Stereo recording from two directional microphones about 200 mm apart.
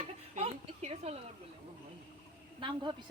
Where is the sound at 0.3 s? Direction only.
30° right (ahead or behind).